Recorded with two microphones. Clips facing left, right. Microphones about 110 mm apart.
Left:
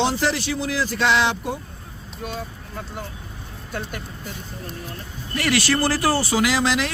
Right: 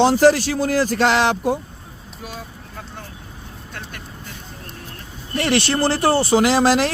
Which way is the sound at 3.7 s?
10° left (ahead or behind).